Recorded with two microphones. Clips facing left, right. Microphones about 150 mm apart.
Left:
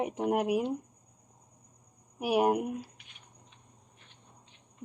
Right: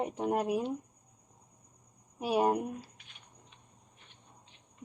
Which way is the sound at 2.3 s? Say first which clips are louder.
Left 2 dB; 10° left (ahead or behind).